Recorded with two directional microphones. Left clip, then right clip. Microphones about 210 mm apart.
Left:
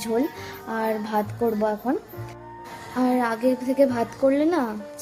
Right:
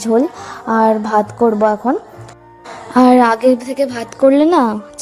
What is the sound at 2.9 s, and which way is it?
A woman's voice, 40° right (ahead or behind).